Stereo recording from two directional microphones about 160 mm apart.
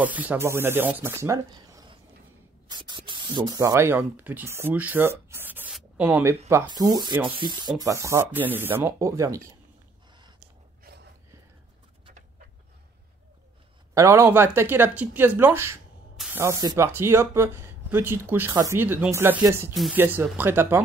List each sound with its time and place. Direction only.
0.0 s speech: 10° right (ahead or behind)
5.7 s writing: 5° right (ahead or behind)
6.7 s speech: 25° right (ahead or behind)
7.8 s speech: 20° right (ahead or behind)
10.8 s a sound: 90° right
13.9 s speech: 20° right (ahead or behind)
19.7 s speech: centre (ahead or behind)
20.0 s speech: 15° right (ahead or behind)